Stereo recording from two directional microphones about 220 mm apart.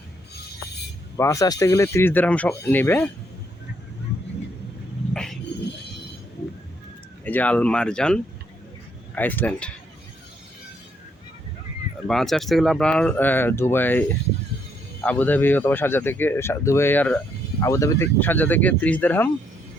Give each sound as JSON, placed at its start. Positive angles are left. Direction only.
{"t": 1.1, "sound": "speech", "side_deg": 15}
{"t": 5.1, "sound": "vehicle", "side_deg": 0}
{"t": 7.3, "sound": "speech", "side_deg": 5}
{"t": 12.0, "sound": "speech", "side_deg": 0}
{"t": 15.0, "sound": "speech", "side_deg": 5}